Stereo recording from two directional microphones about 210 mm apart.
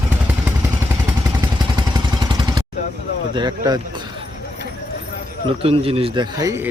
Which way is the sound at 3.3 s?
20° right (ahead or behind).